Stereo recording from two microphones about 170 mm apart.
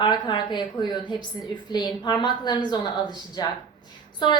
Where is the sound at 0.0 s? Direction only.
25° left (ahead or behind).